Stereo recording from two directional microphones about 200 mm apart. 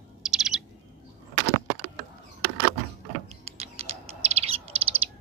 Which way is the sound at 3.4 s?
30° right (ahead or behind).